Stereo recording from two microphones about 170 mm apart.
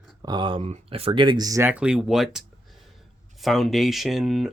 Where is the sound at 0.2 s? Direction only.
25° right (ahead or behind); by 2.4 s centre (ahead or behind).